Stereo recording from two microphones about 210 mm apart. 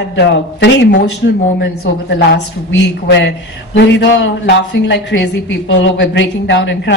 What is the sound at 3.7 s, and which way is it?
A woman's voice, 55° left (ahead or behind).